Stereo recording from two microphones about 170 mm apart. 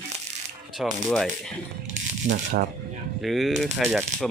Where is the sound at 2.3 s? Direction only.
45° right (ahead or behind).